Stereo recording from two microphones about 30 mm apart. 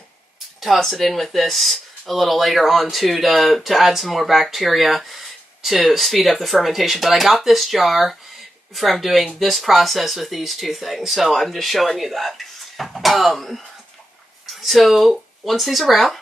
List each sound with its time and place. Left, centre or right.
0.6 s speech: centre